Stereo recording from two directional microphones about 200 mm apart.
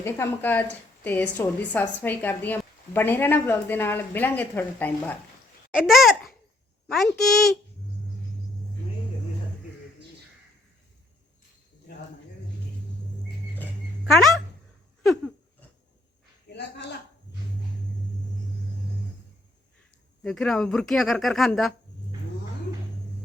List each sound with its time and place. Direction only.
0.0 s a woman's voice: 10° left (ahead or behind)
5.7 s babbling: centre (ahead or behind)
6.8 s speech: centre (ahead or behind)
14.0 s speech: centre (ahead or behind)
16.5 s a sound: 60° left (ahead or behind)
20.2 s speech: 5° left (ahead or behind)